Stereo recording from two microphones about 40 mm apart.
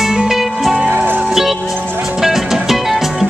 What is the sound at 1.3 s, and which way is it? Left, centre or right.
Music, centre.